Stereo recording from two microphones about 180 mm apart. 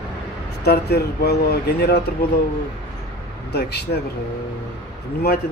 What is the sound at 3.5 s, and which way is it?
Speech, 65° left (ahead or behind).